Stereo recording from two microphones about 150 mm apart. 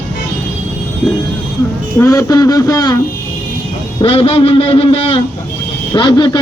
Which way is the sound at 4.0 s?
40° left (ahead or behind).